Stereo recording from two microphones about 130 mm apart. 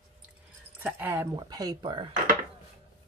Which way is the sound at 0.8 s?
15° right (ahead or behind).